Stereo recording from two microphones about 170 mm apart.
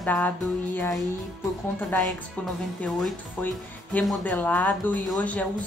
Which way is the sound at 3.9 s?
10° left (ahead or behind).